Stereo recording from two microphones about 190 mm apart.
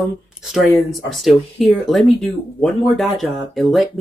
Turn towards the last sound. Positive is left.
turn(degrees=0)  # may be behind; listen again after turning